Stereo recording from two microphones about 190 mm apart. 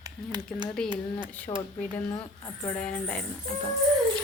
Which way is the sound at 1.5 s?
20° left (ahead or behind).